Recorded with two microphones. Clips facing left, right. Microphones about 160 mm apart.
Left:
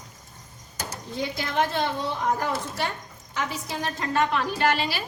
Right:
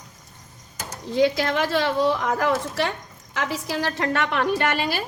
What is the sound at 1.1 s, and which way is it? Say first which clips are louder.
A woman's voice: right 9 dB; 90° right.